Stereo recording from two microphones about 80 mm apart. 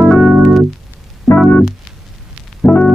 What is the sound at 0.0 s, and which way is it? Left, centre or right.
Keyboard, centre.